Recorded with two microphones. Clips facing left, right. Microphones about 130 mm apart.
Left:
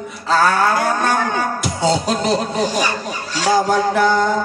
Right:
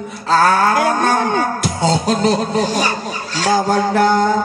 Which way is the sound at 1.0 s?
35° right (ahead or behind).